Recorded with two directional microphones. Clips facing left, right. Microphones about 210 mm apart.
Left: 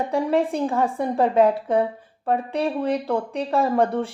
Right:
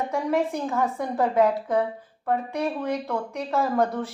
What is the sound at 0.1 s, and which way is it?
A woman's voice, 30° left (ahead or behind).